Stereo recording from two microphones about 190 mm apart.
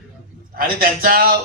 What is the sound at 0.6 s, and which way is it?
Speech, 50° right (ahead or behind).